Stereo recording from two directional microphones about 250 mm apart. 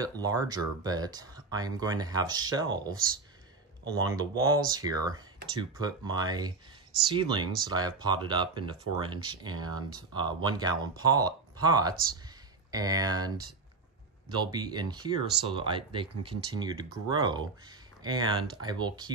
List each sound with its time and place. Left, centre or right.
0.2 s speech: centre
3.8 s speech: centre